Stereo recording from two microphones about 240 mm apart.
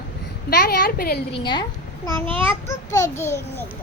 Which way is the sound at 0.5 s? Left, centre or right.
Left.